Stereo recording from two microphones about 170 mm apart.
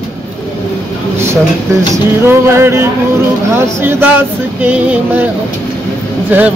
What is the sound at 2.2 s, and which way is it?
A man's voice, 15° right (ahead or behind).